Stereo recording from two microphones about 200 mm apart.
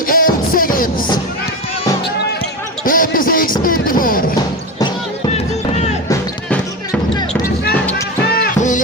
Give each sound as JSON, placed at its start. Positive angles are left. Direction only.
{"t": 0.1, "sound": "music", "side_deg": 45}
{"t": 2.8, "sound": "basketball bounce", "side_deg": 45}
{"t": 3.6, "sound": "music", "side_deg": 45}
{"t": 7.7, "sound": "basketball bounce", "side_deg": 5}
{"t": 8.3, "sound": "music", "side_deg": 45}